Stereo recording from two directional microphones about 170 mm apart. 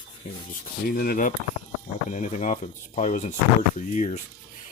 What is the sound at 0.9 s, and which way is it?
Speech, 60° left (ahead or behind).